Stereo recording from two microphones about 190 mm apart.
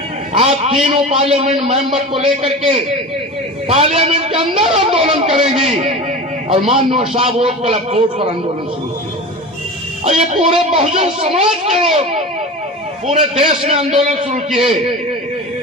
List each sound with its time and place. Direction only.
0.3 s a man's voice: 30° right (ahead or behind)
3.7 s a man's voice: 30° right (ahead or behind)
10.0 s a man's voice: 35° right (ahead or behind)